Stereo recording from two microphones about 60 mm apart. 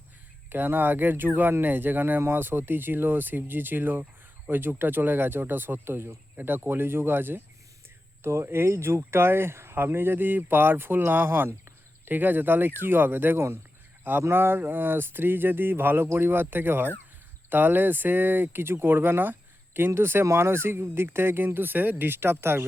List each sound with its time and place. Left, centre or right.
0.5 s speech: right
8.2 s speech: right